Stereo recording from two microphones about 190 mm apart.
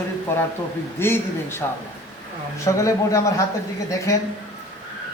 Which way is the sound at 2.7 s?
15° left (ahead or behind).